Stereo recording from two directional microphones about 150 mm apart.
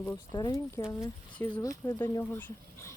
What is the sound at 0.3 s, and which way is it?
Speech, 25° left (ahead or behind).